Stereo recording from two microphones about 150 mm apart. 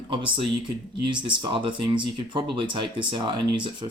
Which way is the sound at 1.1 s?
35° right (ahead or behind).